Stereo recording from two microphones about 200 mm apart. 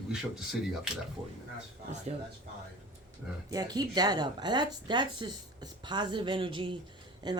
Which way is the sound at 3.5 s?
20° right (ahead or behind).